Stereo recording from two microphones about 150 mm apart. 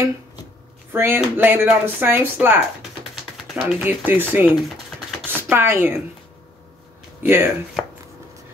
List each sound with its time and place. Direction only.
0.9 s speech: 15° right (ahead or behind)
5.5 s speech: 15° right (ahead or behind)
7.2 s speech: 15° right (ahead or behind)
7.8 s chopping: centre (ahead or behind)